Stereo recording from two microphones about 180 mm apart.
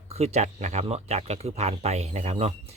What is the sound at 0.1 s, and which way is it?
Speech, 35° right (ahead or behind).